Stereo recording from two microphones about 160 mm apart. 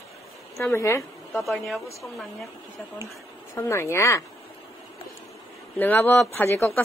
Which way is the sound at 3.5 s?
15° left (ahead or behind).